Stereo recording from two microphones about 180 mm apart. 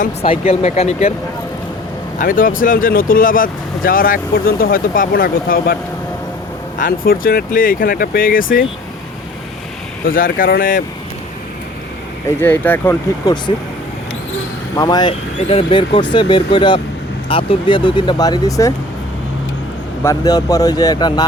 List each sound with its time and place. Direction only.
0.0 s speech: 35° left (ahead or behind)
2.1 s speech: 50° left (ahead or behind)
6.7 s speech: 50° left (ahead or behind)
10.1 s speech: 50° left (ahead or behind)
12.4 s speech: 10° left (ahead or behind)
14.8 s speech: 20° left (ahead or behind)
20.1 s speech: 20° left (ahead or behind)